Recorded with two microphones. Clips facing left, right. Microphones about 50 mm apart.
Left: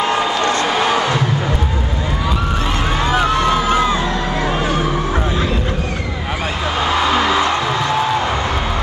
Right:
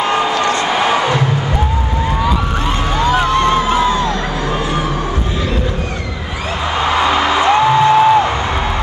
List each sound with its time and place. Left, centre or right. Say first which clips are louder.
0.7 s music: right 2 dB; centre
3.0 s a sound: right 3 dB; centre
3.7 s crowd: right 2 dB; left
6.9 s music: right 2 dB; centre